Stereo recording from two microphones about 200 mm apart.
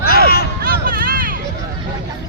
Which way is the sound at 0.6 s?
45° right (ahead or behind).